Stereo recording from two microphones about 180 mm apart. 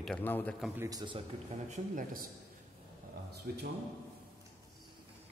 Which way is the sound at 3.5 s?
65° right (ahead or behind).